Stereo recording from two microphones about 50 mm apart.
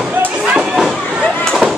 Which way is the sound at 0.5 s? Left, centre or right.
Centre.